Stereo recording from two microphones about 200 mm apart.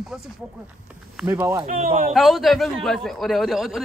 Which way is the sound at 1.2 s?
15° right (ahead or behind).